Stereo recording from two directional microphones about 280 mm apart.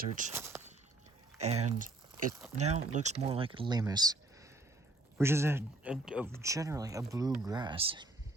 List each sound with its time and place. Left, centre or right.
0.0 s speech: right
0.3 s a sound: centre
1.4 s speech: right